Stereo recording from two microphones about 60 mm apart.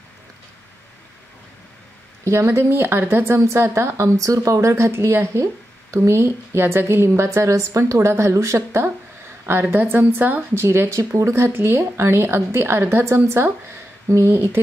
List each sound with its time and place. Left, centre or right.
2.2 s a woman's voice: right
3.3 s a woman's voice: right
10.5 s a woman's voice: right